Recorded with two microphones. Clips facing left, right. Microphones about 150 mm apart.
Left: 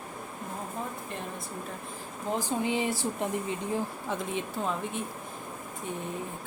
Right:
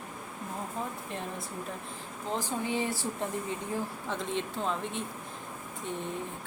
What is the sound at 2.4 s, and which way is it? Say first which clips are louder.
Speech: left 3 dB; 15° left (ahead or behind).